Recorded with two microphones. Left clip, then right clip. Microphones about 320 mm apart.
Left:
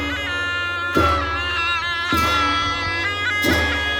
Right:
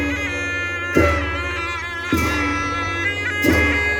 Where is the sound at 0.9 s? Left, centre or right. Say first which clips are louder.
Right 1 dB; centre.